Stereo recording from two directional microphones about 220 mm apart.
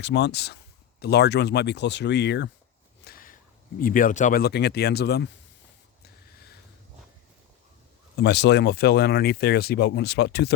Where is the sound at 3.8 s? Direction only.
40° left (ahead or behind).